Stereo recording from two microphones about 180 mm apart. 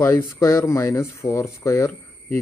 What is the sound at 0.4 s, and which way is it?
Speech, 15° left (ahead or behind).